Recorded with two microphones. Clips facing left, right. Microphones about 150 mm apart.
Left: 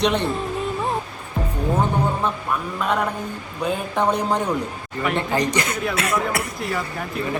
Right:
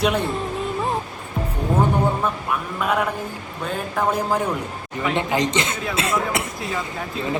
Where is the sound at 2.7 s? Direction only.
5° right (ahead or behind).